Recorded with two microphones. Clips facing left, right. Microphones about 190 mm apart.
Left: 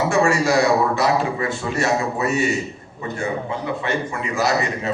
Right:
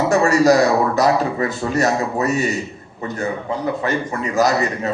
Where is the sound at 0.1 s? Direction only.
40° right (ahead or behind).